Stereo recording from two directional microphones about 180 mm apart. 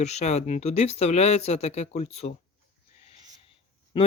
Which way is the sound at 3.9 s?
25° left (ahead or behind).